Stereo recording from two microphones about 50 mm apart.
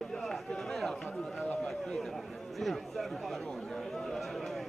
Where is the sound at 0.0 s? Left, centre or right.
Centre.